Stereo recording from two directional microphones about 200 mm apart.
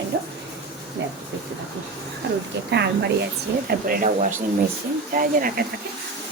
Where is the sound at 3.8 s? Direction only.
45° right (ahead or behind).